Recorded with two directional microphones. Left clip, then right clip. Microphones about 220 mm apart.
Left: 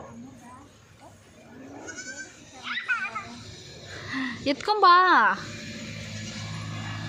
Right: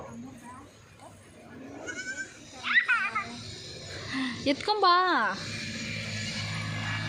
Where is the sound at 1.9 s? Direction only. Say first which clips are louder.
Right 3 dB; centre (ahead or behind).